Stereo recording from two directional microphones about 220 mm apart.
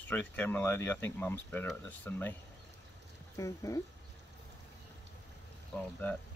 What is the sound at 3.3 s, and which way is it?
Speech, 15° left (ahead or behind).